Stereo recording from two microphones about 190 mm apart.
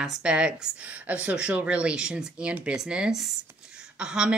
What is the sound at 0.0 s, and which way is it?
Speech, 5° right (ahead or behind).